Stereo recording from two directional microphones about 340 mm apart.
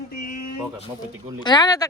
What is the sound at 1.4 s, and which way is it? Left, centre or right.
Speech, centre.